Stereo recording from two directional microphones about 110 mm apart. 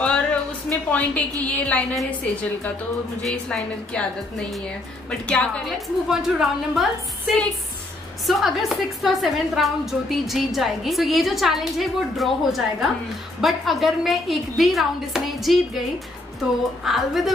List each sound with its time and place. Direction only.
0.0 s a sound: 10° left (ahead or behind)
1.4 s a woman's voice: 10° left (ahead or behind)
5.7 s a woman's voice: 5° right (ahead or behind)
16.8 s a woman's voice: centre (ahead or behind)